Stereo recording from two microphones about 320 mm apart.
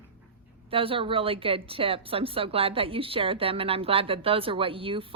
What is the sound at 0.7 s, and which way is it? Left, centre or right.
A woman's voice, centre.